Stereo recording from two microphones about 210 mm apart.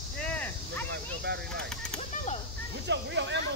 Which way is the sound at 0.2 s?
10° left (ahead or behind).